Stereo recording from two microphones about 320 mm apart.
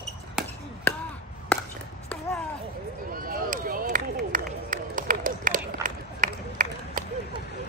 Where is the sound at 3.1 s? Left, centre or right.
Right.